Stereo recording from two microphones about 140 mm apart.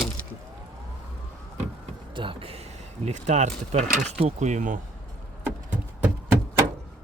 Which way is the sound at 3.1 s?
55° right (ahead or behind).